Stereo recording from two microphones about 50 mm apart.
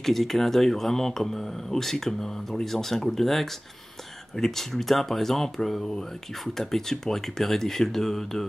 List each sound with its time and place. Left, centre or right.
0.0 s speech: centre